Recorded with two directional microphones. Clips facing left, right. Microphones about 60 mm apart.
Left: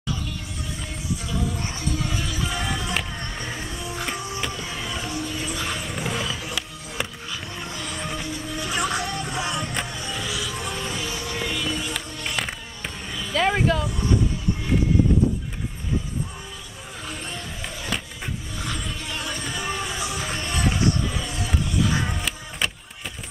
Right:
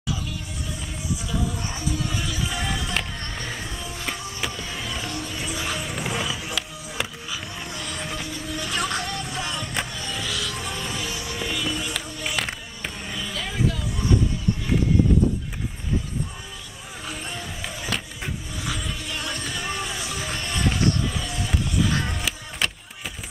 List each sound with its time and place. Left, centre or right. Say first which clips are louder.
1.3 s music: even; centre
4.5 s vehicle: left 1 dB; centre
5.0 s music: left 2 dB; centre
13.3 s music: left 7 dB; left
17.0 s music: right 1 dB; centre
20.3 s music: even; centre
21.0 s skateboard: even; centre
21.5 s music: even; centre